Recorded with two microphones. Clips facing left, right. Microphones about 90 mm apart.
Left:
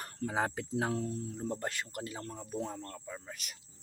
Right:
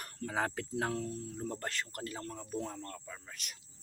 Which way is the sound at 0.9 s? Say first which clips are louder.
Left 2 dB; 25° left (ahead or behind).